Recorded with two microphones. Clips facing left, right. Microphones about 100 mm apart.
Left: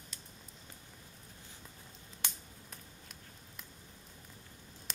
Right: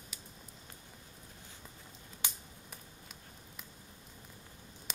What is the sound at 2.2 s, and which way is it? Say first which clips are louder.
Finger snapping: right 1 dB; 5° right (ahead or behind).